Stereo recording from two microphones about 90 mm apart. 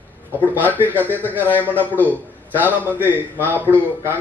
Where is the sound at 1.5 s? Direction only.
20° left (ahead or behind).